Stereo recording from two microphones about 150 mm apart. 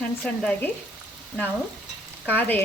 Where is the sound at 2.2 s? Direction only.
10° left (ahead or behind).